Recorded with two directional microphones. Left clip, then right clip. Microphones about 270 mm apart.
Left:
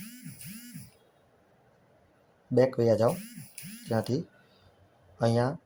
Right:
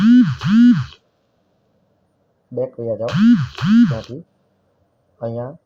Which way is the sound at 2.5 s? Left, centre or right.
Left.